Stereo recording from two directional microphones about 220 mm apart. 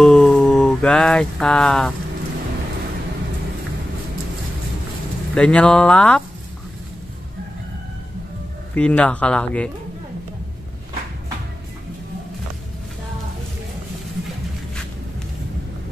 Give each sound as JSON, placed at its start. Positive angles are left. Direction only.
{"t": 0.0, "sound": "a sound", "side_deg": 5}
{"t": 5.3, "sound": "speech", "side_deg": 5}
{"t": 8.7, "sound": "speech", "side_deg": 5}